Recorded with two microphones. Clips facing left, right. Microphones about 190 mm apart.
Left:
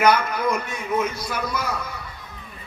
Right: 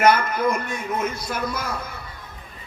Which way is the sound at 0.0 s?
55° right (ahead or behind).